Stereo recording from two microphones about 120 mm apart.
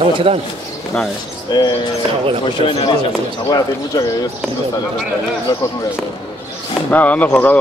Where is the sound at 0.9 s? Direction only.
10° left (ahead or behind).